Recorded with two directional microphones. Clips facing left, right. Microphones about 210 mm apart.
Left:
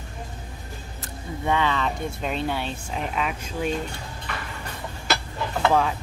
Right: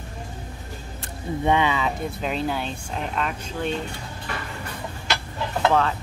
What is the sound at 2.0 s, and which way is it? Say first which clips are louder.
Speech: right 1 dB; centre (ahead or behind).